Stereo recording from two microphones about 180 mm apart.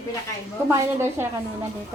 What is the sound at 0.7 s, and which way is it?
Speech, 15° right (ahead or behind).